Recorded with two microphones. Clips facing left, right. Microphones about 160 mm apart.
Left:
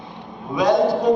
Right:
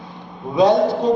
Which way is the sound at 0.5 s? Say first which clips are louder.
Right 3 dB; 25° right (ahead or behind).